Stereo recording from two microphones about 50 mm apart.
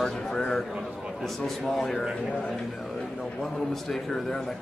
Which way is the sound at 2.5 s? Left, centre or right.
Centre.